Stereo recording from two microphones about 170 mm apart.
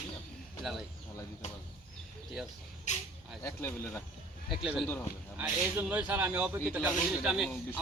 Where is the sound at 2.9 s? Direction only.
45° left (ahead or behind).